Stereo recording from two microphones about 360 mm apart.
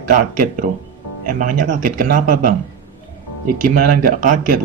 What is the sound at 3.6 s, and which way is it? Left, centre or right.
Speech, right.